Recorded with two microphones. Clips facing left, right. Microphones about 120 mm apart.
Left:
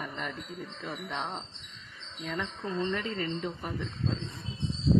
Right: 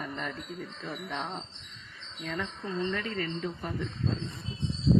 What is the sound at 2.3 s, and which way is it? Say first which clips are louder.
Speech: even; 20° left (ahead or behind).